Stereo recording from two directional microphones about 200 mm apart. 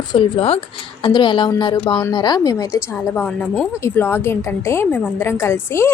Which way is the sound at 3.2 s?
5° left (ahead or behind).